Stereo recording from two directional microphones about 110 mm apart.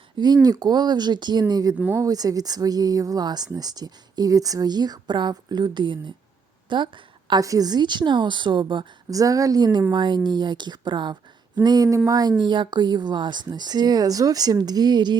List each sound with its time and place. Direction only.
0.4 s a woman's voice: 35° right (ahead or behind)
9.0 s a woman's voice: 30° right (ahead or behind)